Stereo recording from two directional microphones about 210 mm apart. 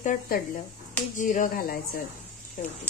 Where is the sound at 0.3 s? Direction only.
45° left (ahead or behind).